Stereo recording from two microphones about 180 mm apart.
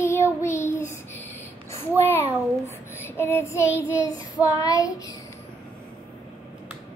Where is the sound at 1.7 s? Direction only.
10° left (ahead or behind).